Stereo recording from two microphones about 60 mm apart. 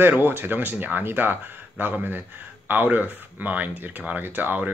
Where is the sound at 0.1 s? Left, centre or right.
Right.